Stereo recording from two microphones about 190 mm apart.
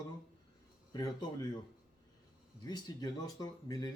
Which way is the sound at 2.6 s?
20° left (ahead or behind).